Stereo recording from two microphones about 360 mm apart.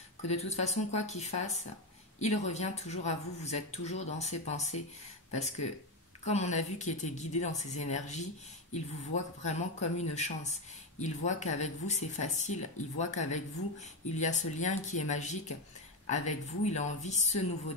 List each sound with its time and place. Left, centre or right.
0.3 s speech: centre